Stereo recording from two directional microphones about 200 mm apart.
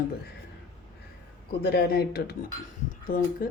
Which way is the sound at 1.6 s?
50° left (ahead or behind).